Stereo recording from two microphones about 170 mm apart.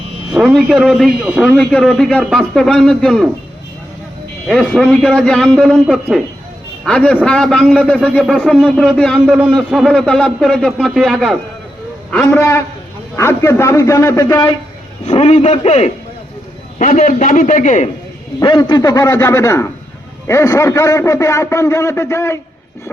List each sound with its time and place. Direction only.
0.3 s a man's voice: centre (ahead or behind)
4.4 s a man's voice: centre (ahead or behind)
12.2 s a man's voice: 15° left (ahead or behind)
15.0 s a man's voice: 40° left (ahead or behind)
16.7 s a man's voice: 50° left (ahead or behind)
18.3 s a man's voice: 25° left (ahead or behind)